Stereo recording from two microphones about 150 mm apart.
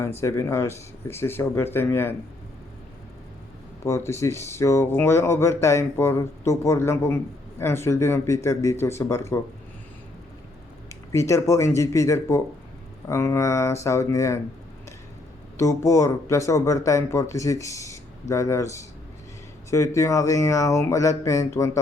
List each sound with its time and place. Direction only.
0.2 s speech: 20° left (ahead or behind)
3.8 s speech: 20° left (ahead or behind)
10.8 s speech: 20° left (ahead or behind)
15.5 s speech: 20° left (ahead or behind)